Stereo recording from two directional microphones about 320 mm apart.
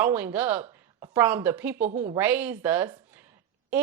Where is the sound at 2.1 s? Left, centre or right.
Centre.